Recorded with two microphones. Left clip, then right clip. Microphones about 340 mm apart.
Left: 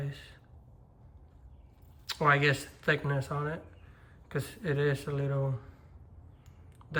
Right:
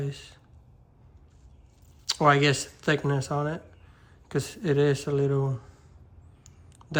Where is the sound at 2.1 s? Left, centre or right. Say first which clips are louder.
Right 5 dB; centre.